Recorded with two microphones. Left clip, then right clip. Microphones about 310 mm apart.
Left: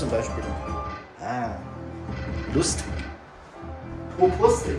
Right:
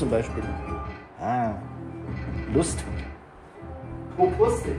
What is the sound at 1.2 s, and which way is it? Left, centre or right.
Music, right.